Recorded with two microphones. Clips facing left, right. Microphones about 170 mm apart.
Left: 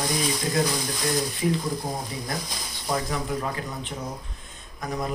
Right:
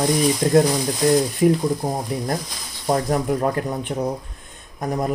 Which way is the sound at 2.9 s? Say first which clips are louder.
Right 8 dB; 45° right (ahead or behind).